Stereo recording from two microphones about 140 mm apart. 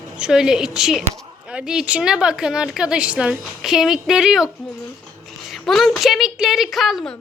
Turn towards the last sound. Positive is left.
turn(degrees=0)  # may be behind; listen again after turning